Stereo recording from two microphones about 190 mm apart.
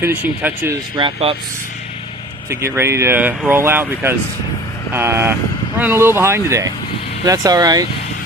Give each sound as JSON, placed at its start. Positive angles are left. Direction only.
{"t": 0.0, "sound": "speech", "side_deg": -10}
{"t": 0.9, "sound": "speech", "side_deg": -25}
{"t": 2.5, "sound": "speech", "side_deg": -15}